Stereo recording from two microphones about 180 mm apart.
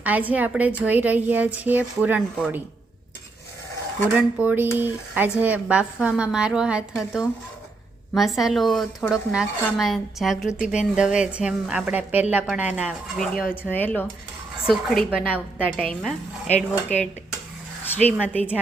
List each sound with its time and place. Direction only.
0.0 s speech: 10° right (ahead or behind)
4.1 s speech: 10° right (ahead or behind)
16.6 s speech: 40° left (ahead or behind)